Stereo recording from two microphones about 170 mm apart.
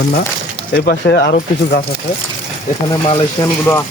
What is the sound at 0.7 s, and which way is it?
Speech, 70° left (ahead or behind).